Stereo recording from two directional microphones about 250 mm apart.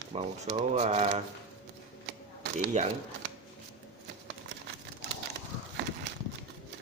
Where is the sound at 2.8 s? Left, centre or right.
Right.